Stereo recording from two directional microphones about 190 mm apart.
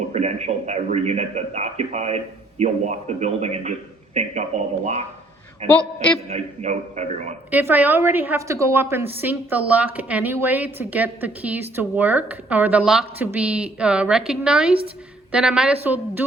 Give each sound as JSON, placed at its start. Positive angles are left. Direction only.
{"t": 0.1, "sound": "a man's voice", "side_deg": -35}
{"t": 7.5, "sound": "a woman's voice", "side_deg": -10}